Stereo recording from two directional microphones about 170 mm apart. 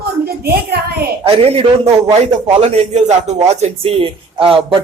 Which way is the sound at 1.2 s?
35° right (ahead or behind).